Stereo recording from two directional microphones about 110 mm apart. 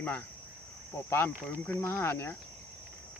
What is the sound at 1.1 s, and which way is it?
Speech, 20° left (ahead or behind).